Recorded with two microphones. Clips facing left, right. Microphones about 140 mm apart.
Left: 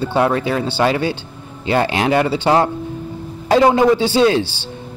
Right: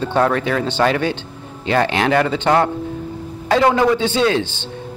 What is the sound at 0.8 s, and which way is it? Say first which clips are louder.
Speech: even; 25° left (ahead or behind).